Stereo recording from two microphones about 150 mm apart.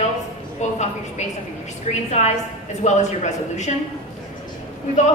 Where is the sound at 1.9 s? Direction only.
50° left (ahead or behind).